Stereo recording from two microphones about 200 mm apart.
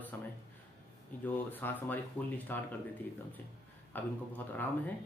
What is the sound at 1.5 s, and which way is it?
Speech, 10° left (ahead or behind).